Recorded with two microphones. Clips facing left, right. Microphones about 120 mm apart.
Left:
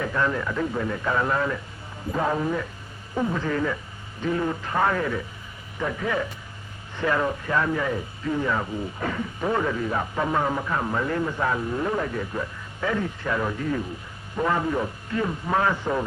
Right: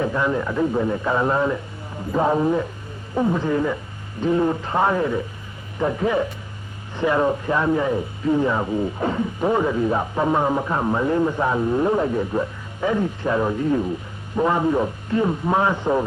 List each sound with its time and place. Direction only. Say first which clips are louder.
0.0 s a man's voice: right 4 dB; 20° right (ahead or behind)